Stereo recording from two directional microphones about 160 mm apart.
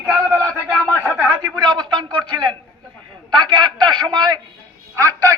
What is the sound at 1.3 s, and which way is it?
A man's voice, 25° right (ahead or behind).